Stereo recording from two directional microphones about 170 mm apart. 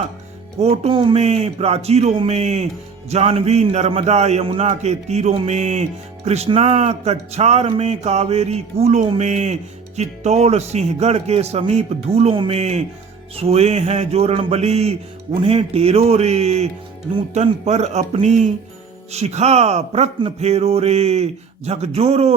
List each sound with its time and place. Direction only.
0.6 s a man's voice: 35° right (ahead or behind)